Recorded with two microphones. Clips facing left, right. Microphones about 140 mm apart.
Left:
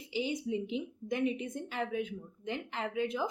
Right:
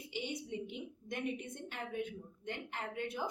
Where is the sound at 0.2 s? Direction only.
90° left.